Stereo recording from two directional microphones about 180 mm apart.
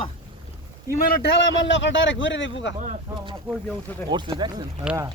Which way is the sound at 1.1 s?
80° left.